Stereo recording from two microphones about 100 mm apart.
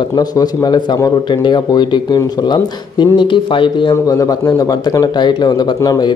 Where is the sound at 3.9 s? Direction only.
35° left (ahead or behind).